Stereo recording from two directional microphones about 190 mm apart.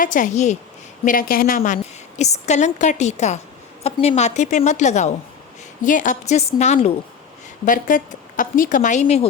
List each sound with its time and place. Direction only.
0.0 s a woman's voice: 45° left (ahead or behind)